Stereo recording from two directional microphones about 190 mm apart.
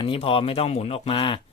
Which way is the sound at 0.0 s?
30° left (ahead or behind).